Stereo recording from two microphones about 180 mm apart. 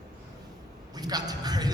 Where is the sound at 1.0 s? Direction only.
20° right (ahead or behind).